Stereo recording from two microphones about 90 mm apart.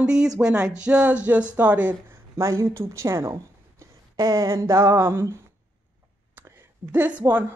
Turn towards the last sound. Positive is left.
turn(degrees=-20)  # may be behind; listen again after turning